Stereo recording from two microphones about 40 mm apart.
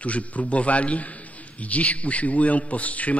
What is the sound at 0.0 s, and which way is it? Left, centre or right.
A man's voice, left.